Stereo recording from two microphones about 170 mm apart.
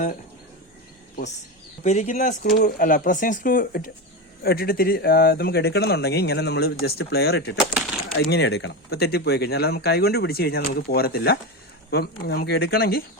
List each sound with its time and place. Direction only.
1.8 s speech: 40° left (ahead or behind); by 7.5 s 75° left (ahead or behind)
7.5 s speech: 5° left (ahead or behind)
8.3 s speech: 75° left (ahead or behind)